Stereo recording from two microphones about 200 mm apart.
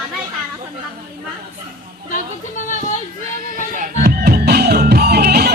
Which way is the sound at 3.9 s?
50° right (ahead or behind).